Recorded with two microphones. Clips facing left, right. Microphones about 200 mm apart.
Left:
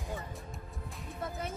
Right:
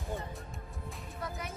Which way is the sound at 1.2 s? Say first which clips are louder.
Left 3 dB; 30° left (ahead or behind).